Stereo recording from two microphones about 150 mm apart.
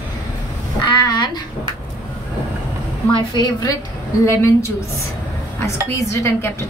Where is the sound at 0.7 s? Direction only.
30° left (ahead or behind).